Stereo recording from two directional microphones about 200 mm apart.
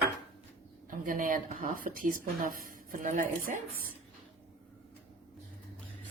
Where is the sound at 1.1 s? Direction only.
40° right (ahead or behind).